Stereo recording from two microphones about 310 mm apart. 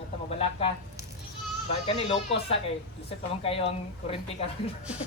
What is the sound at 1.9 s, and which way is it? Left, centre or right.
Speech, centre.